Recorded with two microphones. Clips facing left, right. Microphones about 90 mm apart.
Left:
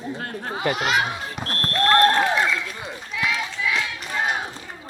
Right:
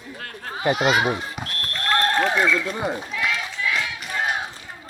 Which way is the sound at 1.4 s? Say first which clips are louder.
Left 4 dB; 35° left (ahead or behind).